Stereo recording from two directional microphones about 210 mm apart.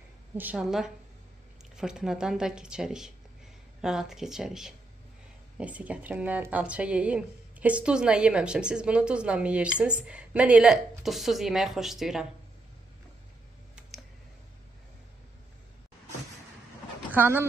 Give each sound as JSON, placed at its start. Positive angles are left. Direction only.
{"t": 0.4, "sound": "speech", "side_deg": -5}
{"t": 17.1, "sound": "speech", "side_deg": -10}